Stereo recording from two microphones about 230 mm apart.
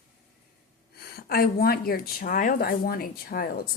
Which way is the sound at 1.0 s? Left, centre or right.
Left.